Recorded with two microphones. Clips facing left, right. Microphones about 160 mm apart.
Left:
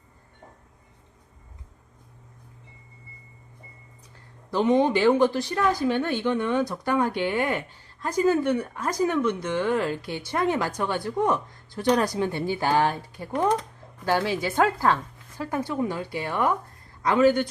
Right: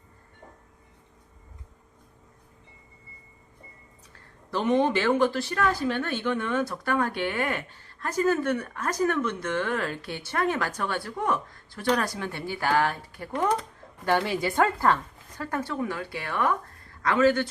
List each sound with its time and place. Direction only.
4.5 s speech: 15° left (ahead or behind)
13.6 s speech: 5° left (ahead or behind)